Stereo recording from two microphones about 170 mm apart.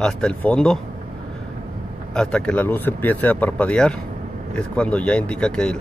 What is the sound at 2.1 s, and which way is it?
Speech, 5° left (ahead or behind).